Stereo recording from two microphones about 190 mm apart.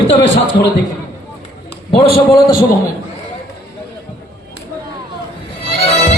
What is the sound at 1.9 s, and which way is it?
Speech, 30° left (ahead or behind).